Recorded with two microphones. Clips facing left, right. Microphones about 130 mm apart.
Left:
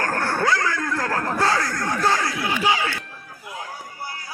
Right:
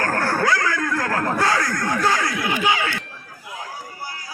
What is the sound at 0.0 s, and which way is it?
Speech, 25° left (ahead or behind).